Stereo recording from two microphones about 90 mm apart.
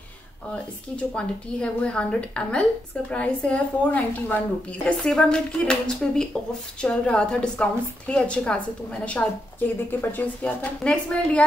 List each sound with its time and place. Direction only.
0.9 s a woman's voice: 10° left (ahead or behind)